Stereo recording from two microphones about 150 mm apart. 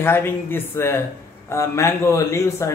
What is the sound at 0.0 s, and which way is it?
Speech, 15° left (ahead or behind).